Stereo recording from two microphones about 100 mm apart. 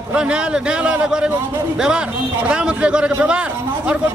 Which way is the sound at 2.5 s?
10° right (ahead or behind).